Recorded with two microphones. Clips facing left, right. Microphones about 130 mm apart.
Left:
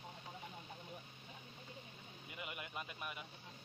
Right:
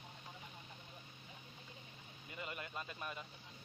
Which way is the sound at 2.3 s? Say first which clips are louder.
Right 2 dB; 15° left (ahead or behind).